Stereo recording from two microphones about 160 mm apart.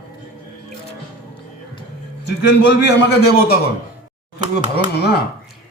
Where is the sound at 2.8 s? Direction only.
85° left.